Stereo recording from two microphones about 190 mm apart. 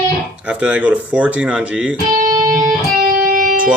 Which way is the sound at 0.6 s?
5° right (ahead or behind).